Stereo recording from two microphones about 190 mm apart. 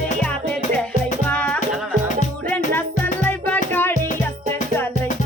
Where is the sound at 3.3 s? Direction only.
10° left (ahead or behind).